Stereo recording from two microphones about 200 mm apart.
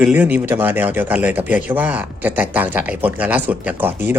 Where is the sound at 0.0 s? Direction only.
10° right (ahead or behind).